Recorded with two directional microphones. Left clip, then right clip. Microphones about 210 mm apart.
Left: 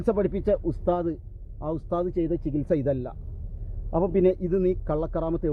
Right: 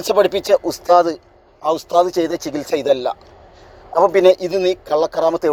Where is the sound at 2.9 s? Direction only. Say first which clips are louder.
Right 13 dB; 5° right (ahead or behind).